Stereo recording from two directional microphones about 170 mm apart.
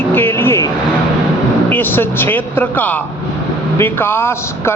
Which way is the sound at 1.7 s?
10° left (ahead or behind).